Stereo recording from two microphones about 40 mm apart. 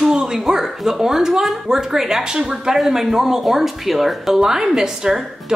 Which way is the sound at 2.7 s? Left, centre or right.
Centre.